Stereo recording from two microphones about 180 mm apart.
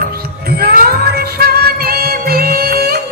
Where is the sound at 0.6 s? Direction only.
60° right (ahead or behind).